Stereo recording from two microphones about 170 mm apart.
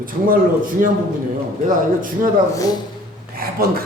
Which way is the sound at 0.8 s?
50° right (ahead or behind).